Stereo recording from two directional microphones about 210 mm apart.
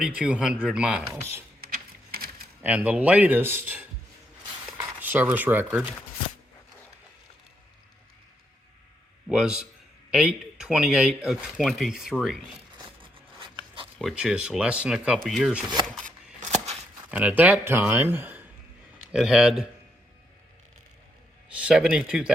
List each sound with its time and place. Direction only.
0.0 s speech: 5° right (ahead or behind)
1.7 s a sound: 45° right (ahead or behind)
2.6 s a man's voice: 5° right (ahead or behind)
4.9 s a man's voice: 10° right (ahead or behind)
9.2 s speech: 5° right (ahead or behind)
13.0 s zipper: 25° right (ahead or behind)
14.0 s speech: 5° right (ahead or behind)
16.0 s scissors: 35° right (ahead or behind)
17.1 s a man's voice: 5° right (ahead or behind)
21.5 s speech: 5° right (ahead or behind)